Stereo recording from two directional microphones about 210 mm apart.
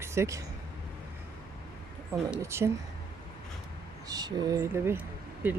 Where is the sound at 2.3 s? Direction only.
10° right (ahead or behind).